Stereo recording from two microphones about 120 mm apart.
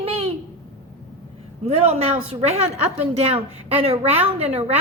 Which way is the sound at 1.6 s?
60° right (ahead or behind).